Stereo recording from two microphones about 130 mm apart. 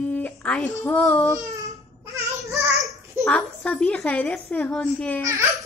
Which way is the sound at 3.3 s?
10° left (ahead or behind).